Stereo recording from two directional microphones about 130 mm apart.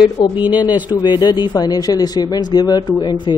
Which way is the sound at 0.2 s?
30° left (ahead or behind).